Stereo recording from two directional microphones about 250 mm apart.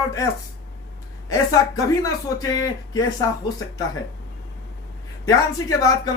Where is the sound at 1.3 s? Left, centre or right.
Centre.